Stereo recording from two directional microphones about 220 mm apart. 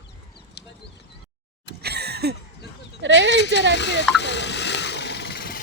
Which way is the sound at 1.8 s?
45° right (ahead or behind).